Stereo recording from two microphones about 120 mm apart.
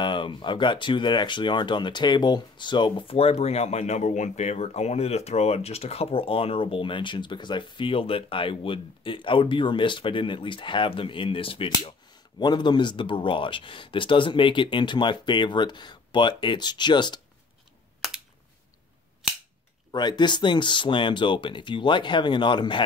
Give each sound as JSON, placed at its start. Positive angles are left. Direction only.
{"t": 0.0, "sound": "speech", "side_deg": 40}
{"t": 18.0, "sound": "a sound", "side_deg": 0}
{"t": 19.9, "sound": "speech", "side_deg": 40}